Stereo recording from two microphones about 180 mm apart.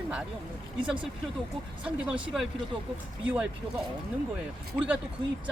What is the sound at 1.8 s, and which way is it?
Speech, 5° right (ahead or behind).